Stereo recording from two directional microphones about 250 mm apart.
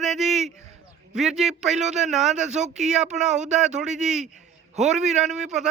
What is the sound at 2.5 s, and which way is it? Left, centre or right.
Speech, right.